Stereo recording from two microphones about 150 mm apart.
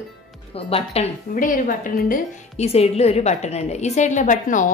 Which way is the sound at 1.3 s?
65° left (ahead or behind).